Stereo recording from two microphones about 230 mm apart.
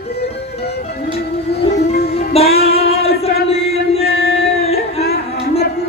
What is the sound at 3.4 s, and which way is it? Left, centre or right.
Chant, left.